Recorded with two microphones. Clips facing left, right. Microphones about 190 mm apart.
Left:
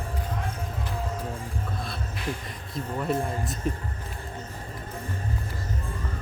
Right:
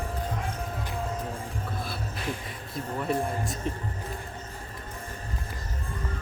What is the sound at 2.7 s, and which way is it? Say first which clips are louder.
Speech: left 1 dB; centre (ahead or behind).